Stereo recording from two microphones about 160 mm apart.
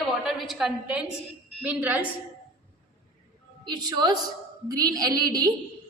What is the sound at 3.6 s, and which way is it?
A woman's voice, 25° right (ahead or behind).